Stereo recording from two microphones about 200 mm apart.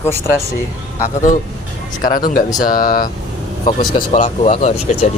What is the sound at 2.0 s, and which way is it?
Speech, 45° left (ahead or behind).